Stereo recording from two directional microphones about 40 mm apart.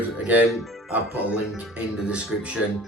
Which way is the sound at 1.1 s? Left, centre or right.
Right.